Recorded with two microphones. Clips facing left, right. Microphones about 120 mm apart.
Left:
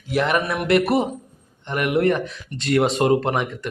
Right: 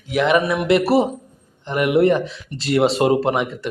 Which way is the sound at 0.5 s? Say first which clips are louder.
Right 3 dB; 25° right (ahead or behind).